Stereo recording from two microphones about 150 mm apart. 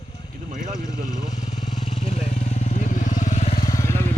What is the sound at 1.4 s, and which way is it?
Vehicle, 50° left (ahead or behind).